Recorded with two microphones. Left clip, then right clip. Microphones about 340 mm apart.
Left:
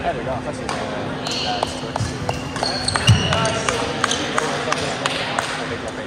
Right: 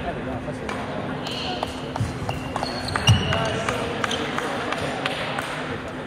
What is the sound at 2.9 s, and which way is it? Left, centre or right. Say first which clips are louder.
Basketball bounce: left 2 dB; left.